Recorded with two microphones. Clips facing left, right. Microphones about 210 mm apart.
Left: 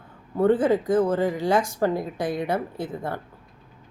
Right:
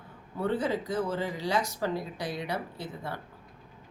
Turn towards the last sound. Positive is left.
turn(degrees=50)  # may be behind; listen again after turning